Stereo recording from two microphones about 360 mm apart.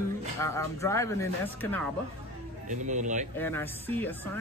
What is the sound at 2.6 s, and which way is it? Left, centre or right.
Speech, centre.